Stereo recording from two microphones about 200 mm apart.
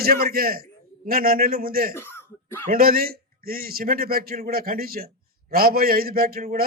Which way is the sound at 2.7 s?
45° right (ahead or behind).